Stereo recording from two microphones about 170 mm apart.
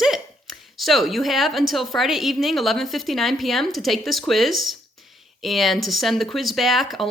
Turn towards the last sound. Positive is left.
turn(degrees=0)  # may be behind; listen again after turning